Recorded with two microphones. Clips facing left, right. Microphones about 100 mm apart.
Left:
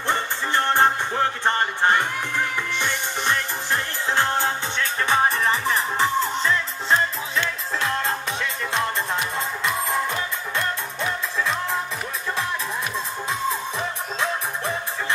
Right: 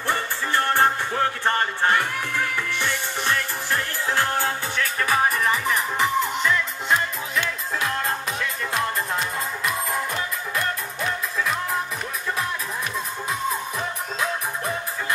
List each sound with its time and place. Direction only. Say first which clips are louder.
0.0 s music: left 1 dB; 20° left (ahead or behind)
10.5 s music: left 1 dB; 30° left (ahead or behind)